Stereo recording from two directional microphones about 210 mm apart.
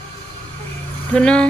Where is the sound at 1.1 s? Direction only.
5° left (ahead or behind).